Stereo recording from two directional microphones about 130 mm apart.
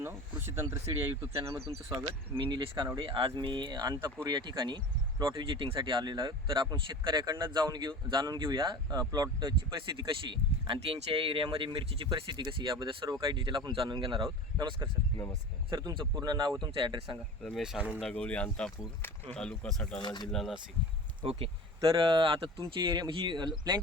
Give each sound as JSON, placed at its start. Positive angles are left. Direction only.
{"t": 0.0, "sound": "speech", "side_deg": -20}
{"t": 2.4, "sound": "speech", "side_deg": -35}
{"t": 17.4, "sound": "speech", "side_deg": 0}
{"t": 18.0, "sound": "speech", "side_deg": 10}
{"t": 20.0, "sound": "speech", "side_deg": 35}
{"t": 20.2, "sound": "speech", "side_deg": 0}
{"t": 21.2, "sound": "speech", "side_deg": -45}